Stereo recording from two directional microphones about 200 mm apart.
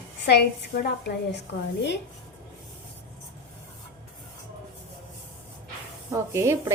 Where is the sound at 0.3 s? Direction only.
55° left (ahead or behind).